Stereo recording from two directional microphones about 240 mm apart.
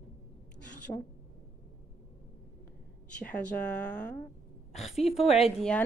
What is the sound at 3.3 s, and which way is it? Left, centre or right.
Speech, centre.